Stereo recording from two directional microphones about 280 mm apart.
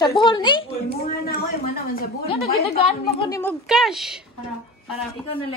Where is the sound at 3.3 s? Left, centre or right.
Centre.